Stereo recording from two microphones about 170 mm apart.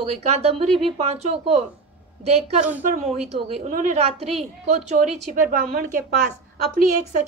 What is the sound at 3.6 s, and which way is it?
A woman's voice, 50° right (ahead or behind).